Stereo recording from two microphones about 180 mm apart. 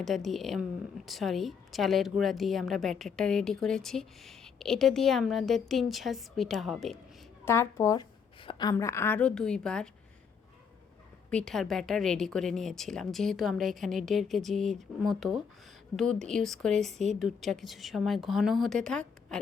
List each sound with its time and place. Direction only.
0.0 s speech: centre (ahead or behind)
7.4 s a woman's voice: 15° left (ahead or behind)
8.7 s speech: 15° left (ahead or behind)
11.3 s speech: 5° left (ahead or behind)